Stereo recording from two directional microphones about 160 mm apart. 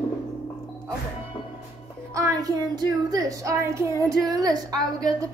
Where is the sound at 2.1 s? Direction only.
20° right (ahead or behind).